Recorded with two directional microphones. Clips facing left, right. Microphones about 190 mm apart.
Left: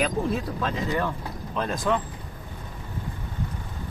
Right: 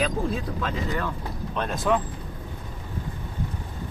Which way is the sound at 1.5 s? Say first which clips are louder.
Right 1 dB; centre (ahead or behind).